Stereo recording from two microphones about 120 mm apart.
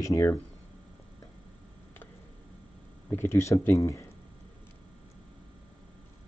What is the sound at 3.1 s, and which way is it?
Speech, 20° left (ahead or behind).